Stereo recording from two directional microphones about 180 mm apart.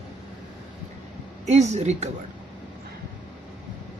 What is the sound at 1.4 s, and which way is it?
Speech, 40° right (ahead or behind).